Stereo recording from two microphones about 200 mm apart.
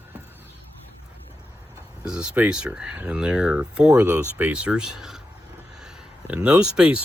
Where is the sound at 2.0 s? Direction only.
5° right (ahead or behind).